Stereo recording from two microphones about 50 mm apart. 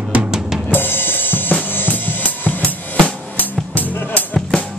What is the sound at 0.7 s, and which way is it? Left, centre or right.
Drum kit, left.